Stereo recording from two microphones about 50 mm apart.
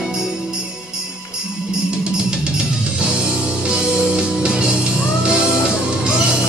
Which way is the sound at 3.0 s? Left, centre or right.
Centre.